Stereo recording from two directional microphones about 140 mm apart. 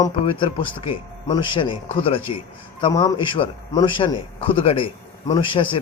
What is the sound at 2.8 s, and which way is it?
A man's voice, 30° left (ahead or behind).